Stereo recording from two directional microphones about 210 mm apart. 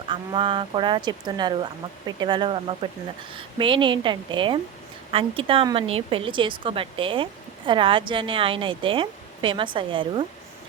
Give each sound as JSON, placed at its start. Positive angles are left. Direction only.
{"t": 0.1, "sound": "speech", "side_deg": -25}